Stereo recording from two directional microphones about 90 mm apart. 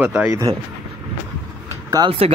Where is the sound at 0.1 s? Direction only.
30° right (ahead or behind).